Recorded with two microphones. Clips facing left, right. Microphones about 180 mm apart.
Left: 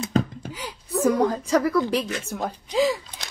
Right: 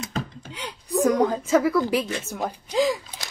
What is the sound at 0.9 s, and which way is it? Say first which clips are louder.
Speech: even; centre (ahead or behind).